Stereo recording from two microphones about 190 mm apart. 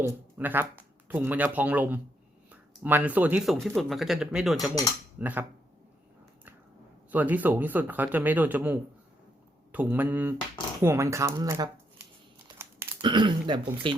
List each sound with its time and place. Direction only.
0.0 s speech: 10° right (ahead or behind)
7.1 s speech: 10° right (ahead or behind)
13.0 s speech: 25° right (ahead or behind)